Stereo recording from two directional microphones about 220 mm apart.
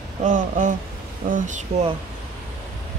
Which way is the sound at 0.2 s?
35° right (ahead or behind).